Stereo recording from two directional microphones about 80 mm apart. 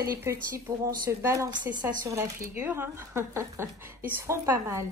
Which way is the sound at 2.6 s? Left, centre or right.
Right.